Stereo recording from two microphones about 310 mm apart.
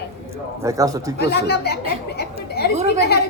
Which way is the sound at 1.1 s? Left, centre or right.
Left.